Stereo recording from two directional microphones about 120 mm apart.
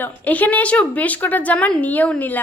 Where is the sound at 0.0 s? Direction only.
15° left (ahead or behind).